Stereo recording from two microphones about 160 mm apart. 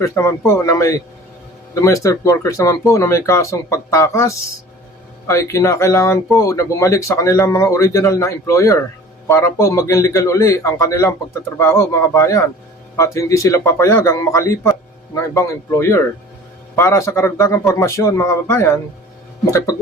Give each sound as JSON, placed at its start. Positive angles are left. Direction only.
{"t": 0.0, "sound": "a man's voice", "side_deg": 20}